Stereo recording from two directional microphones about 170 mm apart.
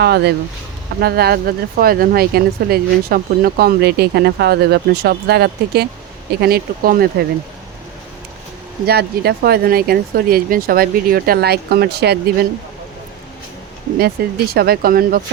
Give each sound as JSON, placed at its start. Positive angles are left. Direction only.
{"t": 0.0, "sound": "speech", "side_deg": -75}
{"t": 8.9, "sound": "speech", "side_deg": -70}
{"t": 14.0, "sound": "speech", "side_deg": -65}